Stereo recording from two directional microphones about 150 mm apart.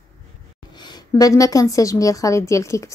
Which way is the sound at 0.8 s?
25° left (ahead or behind).